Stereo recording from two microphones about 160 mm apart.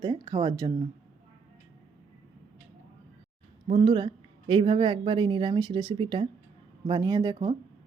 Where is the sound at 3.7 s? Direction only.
30° right (ahead or behind).